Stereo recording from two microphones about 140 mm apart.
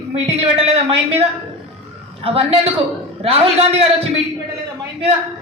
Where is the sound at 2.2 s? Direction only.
45° right (ahead or behind).